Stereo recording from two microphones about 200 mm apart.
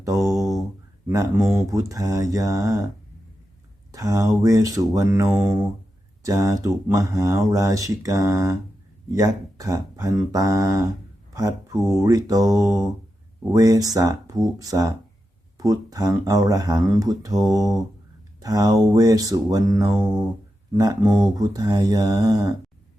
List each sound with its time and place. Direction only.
0.0 s a sound: 15° right (ahead or behind)
1.1 s speech: 15° right (ahead or behind)
3.9 s speech: 15° right (ahead or behind)
18.3 s mantra: 20° right (ahead or behind)